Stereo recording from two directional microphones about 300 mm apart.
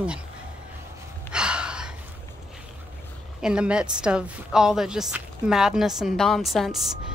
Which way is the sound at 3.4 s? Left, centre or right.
Centre.